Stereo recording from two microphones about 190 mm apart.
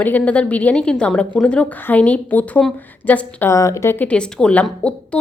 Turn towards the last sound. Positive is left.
turn(degrees=5)  # may be behind; listen again after turning